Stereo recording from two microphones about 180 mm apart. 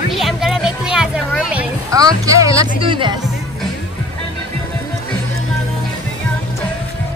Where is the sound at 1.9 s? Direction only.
20° right (ahead or behind).